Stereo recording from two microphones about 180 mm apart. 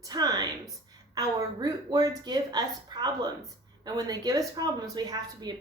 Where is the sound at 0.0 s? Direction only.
20° right (ahead or behind).